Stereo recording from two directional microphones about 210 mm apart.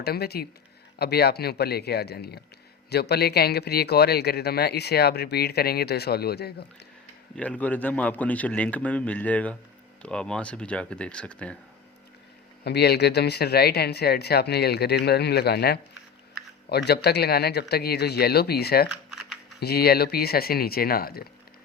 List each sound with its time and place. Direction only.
0.0 s speech: 50° left (ahead or behind)
7.3 s a man's voice: 5° left (ahead or behind)
12.6 s speech: 50° left (ahead or behind)
18.9 s computer keyboard: centre (ahead or behind)
19.5 s speech: 50° left (ahead or behind)